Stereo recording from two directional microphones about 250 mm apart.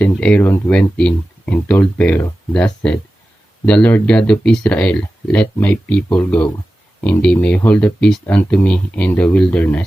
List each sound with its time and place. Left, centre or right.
0.0 s speech: centre